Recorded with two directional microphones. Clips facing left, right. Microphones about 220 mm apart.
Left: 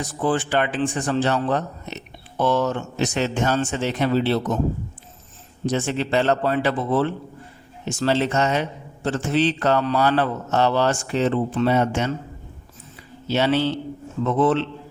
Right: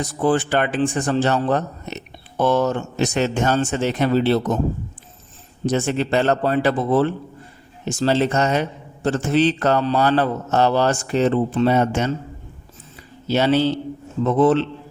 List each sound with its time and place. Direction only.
0.3 s speech: 45° right (ahead or behind)
5.6 s a man's voice: 45° right (ahead or behind)
13.2 s a man's voice: 40° right (ahead or behind)